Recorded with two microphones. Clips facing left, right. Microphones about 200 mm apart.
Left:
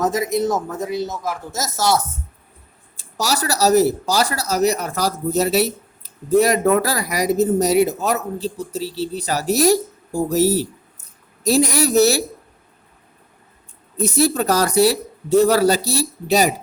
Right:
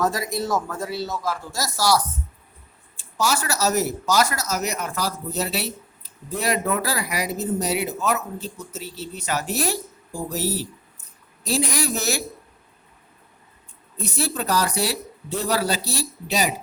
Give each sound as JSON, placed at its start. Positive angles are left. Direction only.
{"t": 0.0, "sound": "speech", "side_deg": 20}
{"t": 3.0, "sound": "speech", "side_deg": 35}
{"t": 13.9, "sound": "speech", "side_deg": 40}